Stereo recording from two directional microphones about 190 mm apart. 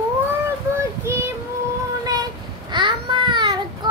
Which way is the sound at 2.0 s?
20° right (ahead or behind).